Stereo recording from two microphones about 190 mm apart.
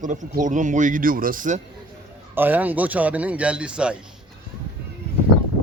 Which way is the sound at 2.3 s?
10° right (ahead or behind).